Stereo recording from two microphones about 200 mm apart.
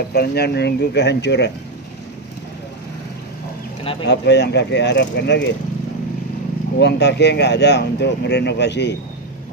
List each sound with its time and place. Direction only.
0.1 s speech: 55° left (ahead or behind)
4.1 s speech: 60° left (ahead or behind)
6.7 s speech: 60° left (ahead or behind)